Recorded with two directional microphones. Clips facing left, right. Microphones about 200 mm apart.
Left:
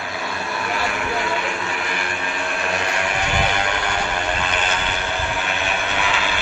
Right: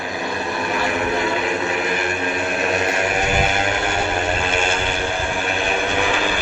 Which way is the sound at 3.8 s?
25° right (ahead or behind).